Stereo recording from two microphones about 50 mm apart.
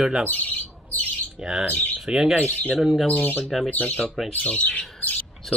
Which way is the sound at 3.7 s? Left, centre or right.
Left.